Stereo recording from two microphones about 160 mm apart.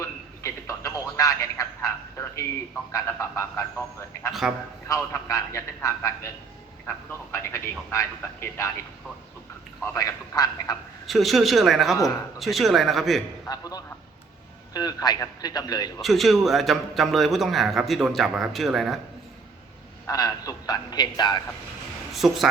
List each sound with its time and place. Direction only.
0.0 s telephone: 20° left (ahead or behind)
2.9 s a man's voice: 20° left (ahead or behind)
4.3 s a man's voice: centre (ahead or behind)
4.9 s a man's voice: 20° left (ahead or behind)
9.8 s a man's voice: 20° left (ahead or behind)
11.0 s a man's voice: centre (ahead or behind)
13.5 s a man's voice: 25° left (ahead or behind)
16.0 s a man's voice: centre (ahead or behind)
20.1 s a man's voice: 20° left (ahead or behind)
22.1 s speech: centre (ahead or behind)